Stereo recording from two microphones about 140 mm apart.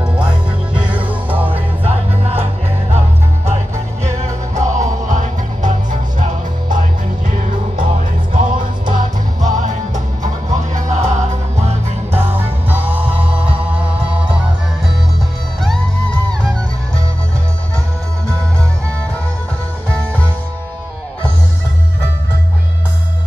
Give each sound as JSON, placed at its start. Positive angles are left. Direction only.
{"t": 1.4, "sound": "music", "side_deg": -45}
{"t": 4.6, "sound": "music", "side_deg": -60}